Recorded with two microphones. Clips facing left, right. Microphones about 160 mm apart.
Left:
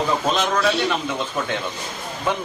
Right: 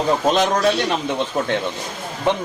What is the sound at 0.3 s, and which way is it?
Speech, 40° right (ahead or behind).